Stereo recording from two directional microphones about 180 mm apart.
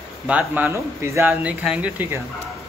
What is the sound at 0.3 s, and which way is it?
Speech, 10° right (ahead or behind).